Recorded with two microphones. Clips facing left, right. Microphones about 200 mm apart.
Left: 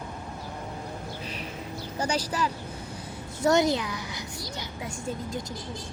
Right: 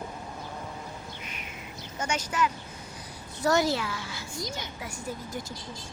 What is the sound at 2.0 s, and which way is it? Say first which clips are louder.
Speech: left 1 dB; 35° left (ahead or behind).